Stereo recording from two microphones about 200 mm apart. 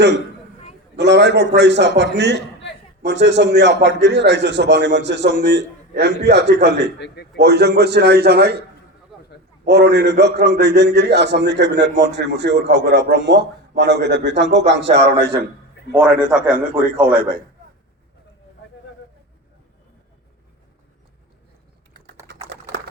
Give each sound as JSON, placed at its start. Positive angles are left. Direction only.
{"t": 0.9, "sound": "a man's voice", "side_deg": -60}
{"t": 9.6, "sound": "a man's voice", "side_deg": -55}
{"t": 16.2, "sound": "a man's voice", "side_deg": -45}
{"t": 22.3, "sound": "typing", "side_deg": -60}